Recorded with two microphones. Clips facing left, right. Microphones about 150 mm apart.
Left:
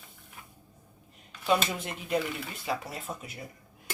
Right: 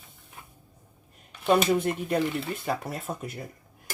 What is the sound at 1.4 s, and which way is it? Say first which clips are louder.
A woman's voice: right 6 dB; 55° right (ahead or behind).